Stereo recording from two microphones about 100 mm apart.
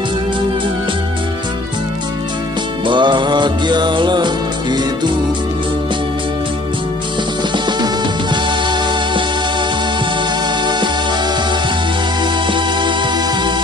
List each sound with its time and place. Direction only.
2.9 s music: 50° right (ahead or behind)
7.5 s music: 50° right (ahead or behind)
10.6 s music: 50° right (ahead or behind)